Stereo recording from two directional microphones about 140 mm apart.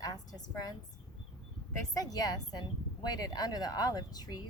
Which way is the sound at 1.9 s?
25° left (ahead or behind).